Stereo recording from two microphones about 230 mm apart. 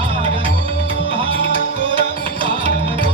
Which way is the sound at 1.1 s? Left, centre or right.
Right.